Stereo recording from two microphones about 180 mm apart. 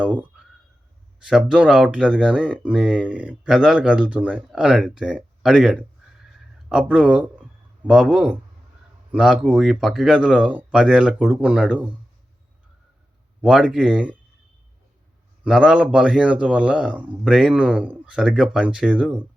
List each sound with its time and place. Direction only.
0.0 s speech: 5° right (ahead or behind)
13.4 s speech: 5° right (ahead or behind)
15.4 s speech: 5° right (ahead or behind)